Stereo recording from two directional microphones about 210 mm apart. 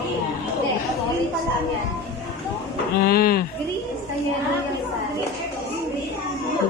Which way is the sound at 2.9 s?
45° left (ahead or behind).